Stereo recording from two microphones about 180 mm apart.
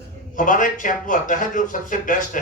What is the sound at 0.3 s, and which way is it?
Speech, 45° left (ahead or behind).